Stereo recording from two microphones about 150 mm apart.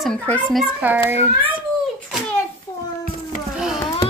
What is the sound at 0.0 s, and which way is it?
Child singing, 5° left (ahead or behind).